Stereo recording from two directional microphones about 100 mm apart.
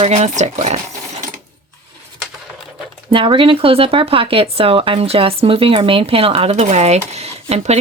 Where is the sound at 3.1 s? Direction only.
60° right (ahead or behind).